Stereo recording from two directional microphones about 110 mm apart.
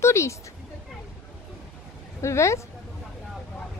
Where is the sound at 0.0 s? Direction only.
25° left (ahead or behind).